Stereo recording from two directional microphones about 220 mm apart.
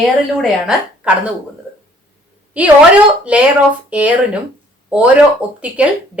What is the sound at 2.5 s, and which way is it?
A woman's voice, 5° right (ahead or behind).